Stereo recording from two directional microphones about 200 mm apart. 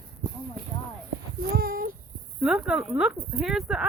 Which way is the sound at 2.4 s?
5° right (ahead or behind).